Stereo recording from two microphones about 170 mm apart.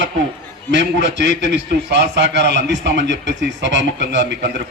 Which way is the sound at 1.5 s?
85° right.